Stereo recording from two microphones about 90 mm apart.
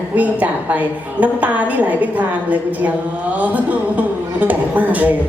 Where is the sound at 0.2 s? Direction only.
15° right (ahead or behind).